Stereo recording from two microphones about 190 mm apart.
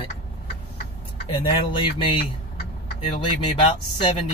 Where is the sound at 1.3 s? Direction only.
30° left (ahead or behind).